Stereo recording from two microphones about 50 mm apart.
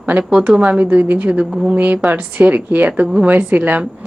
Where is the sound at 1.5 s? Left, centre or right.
Centre.